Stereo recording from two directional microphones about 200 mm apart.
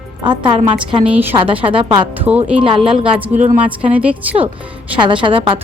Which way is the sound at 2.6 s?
25° right (ahead or behind).